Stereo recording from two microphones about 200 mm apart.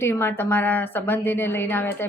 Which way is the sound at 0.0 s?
10° left (ahead or behind).